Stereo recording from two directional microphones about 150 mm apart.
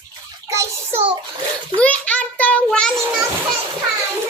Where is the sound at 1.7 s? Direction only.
10° left (ahead or behind).